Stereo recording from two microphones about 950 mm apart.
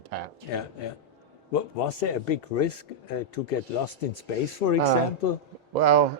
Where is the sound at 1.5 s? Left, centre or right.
Left.